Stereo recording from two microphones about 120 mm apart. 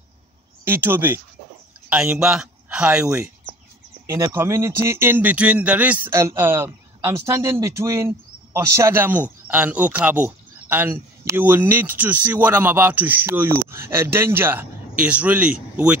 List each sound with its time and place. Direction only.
0.7 s speech: 20° right (ahead or behind)
4.1 s speech: 20° right (ahead or behind)